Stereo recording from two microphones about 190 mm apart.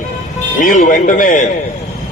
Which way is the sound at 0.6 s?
45° left (ahead or behind).